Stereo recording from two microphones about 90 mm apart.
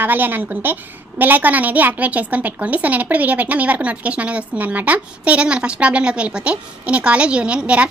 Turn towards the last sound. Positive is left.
turn(degrees=-15)  # may be behind; listen again after turning